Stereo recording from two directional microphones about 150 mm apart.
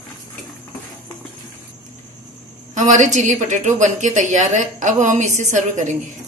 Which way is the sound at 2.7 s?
55° right (ahead or behind).